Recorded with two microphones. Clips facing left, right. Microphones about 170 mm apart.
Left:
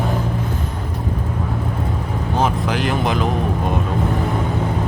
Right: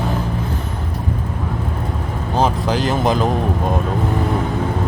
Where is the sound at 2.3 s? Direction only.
35° right (ahead or behind).